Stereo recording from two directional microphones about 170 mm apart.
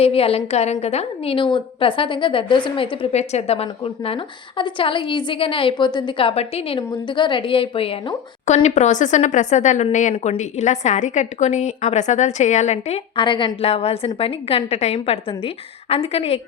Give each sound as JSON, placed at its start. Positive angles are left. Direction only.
{"t": 0.0, "sound": "a woman's voice", "side_deg": 35}